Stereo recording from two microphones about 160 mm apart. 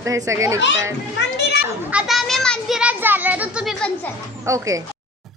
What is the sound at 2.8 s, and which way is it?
Speech, 10° right (ahead or behind).